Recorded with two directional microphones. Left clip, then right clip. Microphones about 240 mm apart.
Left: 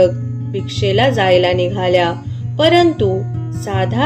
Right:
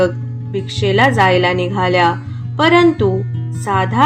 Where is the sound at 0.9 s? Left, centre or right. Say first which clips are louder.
Right 1 dB; right.